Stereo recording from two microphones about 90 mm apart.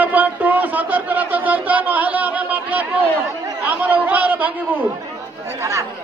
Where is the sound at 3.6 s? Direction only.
15° right (ahead or behind).